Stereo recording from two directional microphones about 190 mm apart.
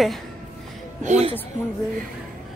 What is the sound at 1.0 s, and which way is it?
Speech, 35° right (ahead or behind).